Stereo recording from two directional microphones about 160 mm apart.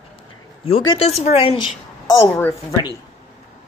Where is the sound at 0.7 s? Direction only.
35° left (ahead or behind).